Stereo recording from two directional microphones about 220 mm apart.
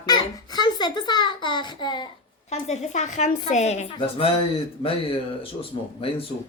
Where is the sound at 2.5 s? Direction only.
30° left (ahead or behind).